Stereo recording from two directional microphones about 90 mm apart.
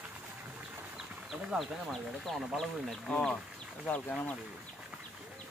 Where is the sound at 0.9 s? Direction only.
5° right (ahead or behind).